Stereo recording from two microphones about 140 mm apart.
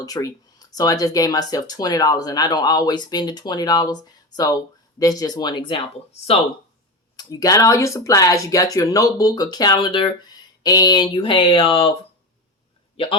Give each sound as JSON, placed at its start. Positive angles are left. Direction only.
{"t": 0.0, "sound": "speech", "side_deg": 25}
{"t": 7.2, "sound": "speech", "side_deg": 25}